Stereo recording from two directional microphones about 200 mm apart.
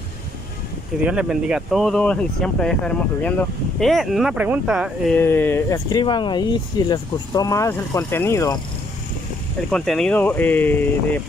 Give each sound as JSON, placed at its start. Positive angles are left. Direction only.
{"t": 1.0, "sound": "speech", "side_deg": -5}
{"t": 5.1, "sound": "speech", "side_deg": 10}
{"t": 9.7, "sound": "speech", "side_deg": 0}